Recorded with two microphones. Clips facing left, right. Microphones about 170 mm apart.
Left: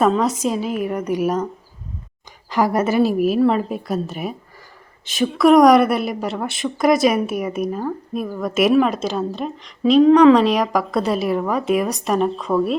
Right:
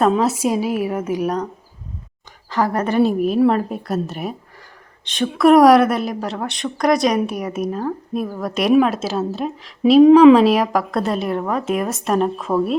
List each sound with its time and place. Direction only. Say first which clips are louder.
0.1 s a woman's voice: right 2 dB; 10° right (ahead or behind)
2.5 s a woman's voice: left 1 dB; 10° left (ahead or behind); by 10.0 s 5° right (ahead or behind)
10.0 s speech: right 3 dB; 15° right (ahead or behind)
10.3 s a woman's voice: right 2 dB; 5° right (ahead or behind)